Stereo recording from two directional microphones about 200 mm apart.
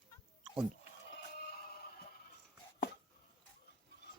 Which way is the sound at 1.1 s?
50° left (ahead or behind).